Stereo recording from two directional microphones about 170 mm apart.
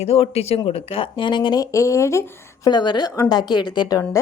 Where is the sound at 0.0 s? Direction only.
35° left (ahead or behind).